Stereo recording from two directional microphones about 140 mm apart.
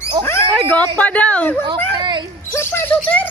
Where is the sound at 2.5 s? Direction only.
15° left (ahead or behind).